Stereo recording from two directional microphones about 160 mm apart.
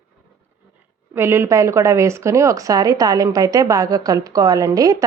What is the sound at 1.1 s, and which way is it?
A woman's voice, 15° right (ahead or behind).